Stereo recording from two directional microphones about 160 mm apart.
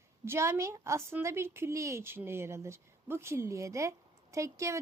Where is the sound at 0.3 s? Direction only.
15° right (ahead or behind).